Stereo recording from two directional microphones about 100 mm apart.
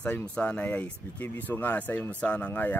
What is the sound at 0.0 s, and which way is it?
Speech, 10° left (ahead or behind).